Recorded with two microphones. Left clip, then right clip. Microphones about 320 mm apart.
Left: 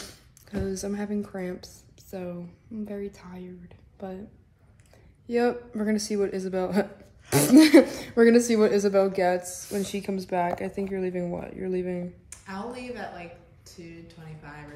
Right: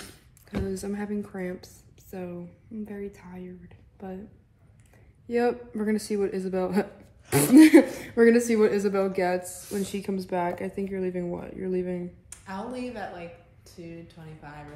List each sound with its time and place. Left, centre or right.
0.7 s speech: centre
5.3 s speech: centre
9.4 s a woman's voice: centre
9.8 s speech: centre
12.3 s a woman's voice: centre